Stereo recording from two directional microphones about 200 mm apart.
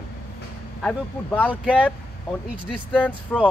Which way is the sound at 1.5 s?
5° right (ahead or behind).